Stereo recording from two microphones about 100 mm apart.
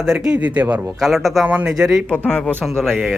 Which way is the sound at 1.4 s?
15° right (ahead or behind).